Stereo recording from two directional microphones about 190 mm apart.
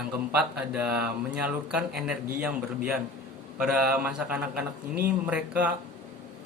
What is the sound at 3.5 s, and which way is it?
A man's voice, 5° right (ahead or behind).